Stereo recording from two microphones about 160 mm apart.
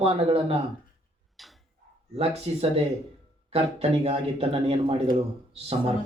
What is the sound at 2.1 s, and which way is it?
Speech, 40° right (ahead or behind).